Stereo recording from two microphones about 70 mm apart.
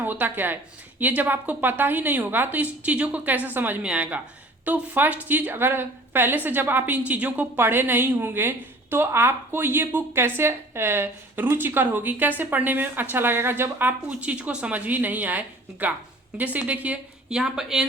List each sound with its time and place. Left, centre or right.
0.0 s a woman's voice: right
7.6 s a woman's voice: right; by 17.8 s centre